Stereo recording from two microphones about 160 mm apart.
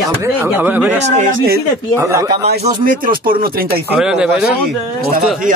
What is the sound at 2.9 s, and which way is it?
Speech, 60° right (ahead or behind).